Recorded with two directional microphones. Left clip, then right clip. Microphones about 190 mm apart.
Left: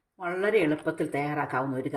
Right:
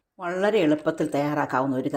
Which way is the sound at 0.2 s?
20° right (ahead or behind).